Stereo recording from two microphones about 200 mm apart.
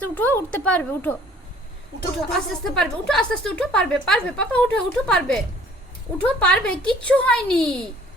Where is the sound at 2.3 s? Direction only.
5° left (ahead or behind).